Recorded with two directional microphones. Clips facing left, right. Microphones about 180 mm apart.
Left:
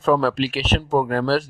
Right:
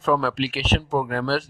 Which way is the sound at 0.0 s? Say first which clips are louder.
Left 3 dB; 35° left (ahead or behind).